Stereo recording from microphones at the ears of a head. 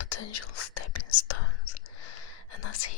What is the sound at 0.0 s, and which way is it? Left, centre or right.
Whispering, left.